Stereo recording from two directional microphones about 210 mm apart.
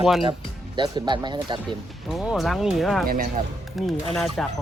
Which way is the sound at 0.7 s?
20° right (ahead or behind).